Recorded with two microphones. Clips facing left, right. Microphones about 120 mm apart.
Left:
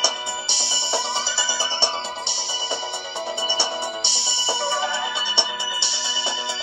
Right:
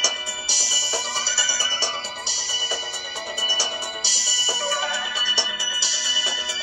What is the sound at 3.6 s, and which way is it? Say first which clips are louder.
Music: left 4 dB; 25° left (ahead or behind).